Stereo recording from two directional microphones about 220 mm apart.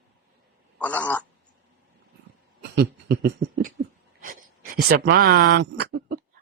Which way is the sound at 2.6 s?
50° right (ahead or behind).